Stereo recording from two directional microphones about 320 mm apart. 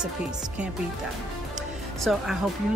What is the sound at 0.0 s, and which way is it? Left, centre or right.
Speech, centre.